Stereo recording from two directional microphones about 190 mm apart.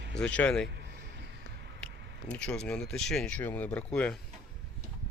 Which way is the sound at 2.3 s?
5° left (ahead or behind).